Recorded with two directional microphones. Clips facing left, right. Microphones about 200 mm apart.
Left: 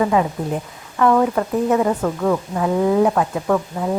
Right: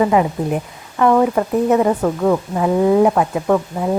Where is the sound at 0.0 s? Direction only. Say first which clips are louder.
Right 3 dB; 20° right (ahead or behind).